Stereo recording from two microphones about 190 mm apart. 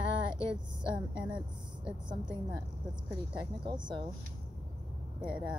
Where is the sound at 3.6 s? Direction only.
25° right (ahead or behind).